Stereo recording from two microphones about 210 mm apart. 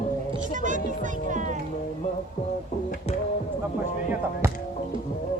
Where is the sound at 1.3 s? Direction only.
35° right (ahead or behind).